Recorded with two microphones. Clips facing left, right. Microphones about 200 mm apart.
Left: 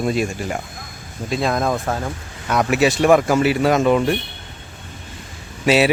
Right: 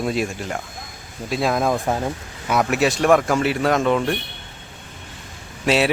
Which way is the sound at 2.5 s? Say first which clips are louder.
Left 2 dB; centre (ahead or behind).